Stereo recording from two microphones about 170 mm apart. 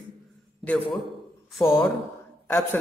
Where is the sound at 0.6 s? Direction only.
5° left (ahead or behind).